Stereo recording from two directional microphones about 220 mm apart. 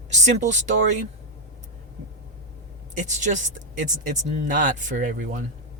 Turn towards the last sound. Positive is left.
turn(degrees=-35)  # may be behind; listen again after turning